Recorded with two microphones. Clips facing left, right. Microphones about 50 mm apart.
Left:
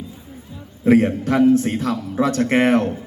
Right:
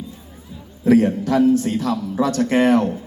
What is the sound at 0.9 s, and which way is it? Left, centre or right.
A man's voice, left.